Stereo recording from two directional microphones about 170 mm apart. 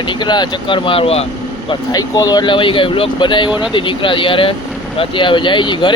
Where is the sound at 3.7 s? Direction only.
30° left (ahead or behind).